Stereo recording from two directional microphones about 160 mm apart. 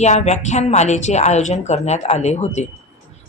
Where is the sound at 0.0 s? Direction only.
45° left (ahead or behind).